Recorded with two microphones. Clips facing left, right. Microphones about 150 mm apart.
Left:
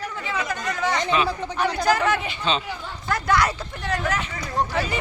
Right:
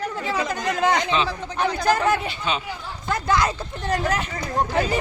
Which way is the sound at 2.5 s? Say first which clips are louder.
Left 2 dB; 10° right (ahead or behind).